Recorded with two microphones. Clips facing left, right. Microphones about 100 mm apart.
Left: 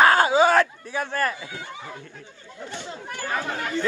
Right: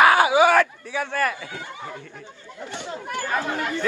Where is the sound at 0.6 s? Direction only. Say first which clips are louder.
Right 1 dB; 20° left (ahead or behind).